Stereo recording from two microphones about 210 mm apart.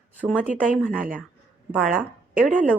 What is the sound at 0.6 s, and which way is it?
A woman's voice, 5° left (ahead or behind).